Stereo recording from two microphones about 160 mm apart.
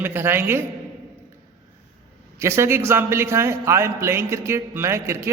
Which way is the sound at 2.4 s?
15° right (ahead or behind).